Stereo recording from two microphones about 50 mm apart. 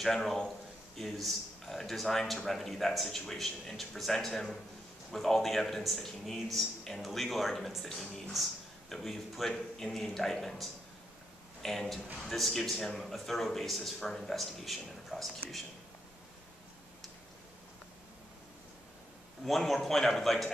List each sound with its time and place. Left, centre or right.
0.0 s a man's voice: centre
19.4 s speech: centre